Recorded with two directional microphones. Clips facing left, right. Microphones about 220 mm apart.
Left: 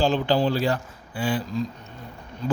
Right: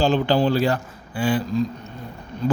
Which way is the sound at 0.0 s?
65° right (ahead or behind).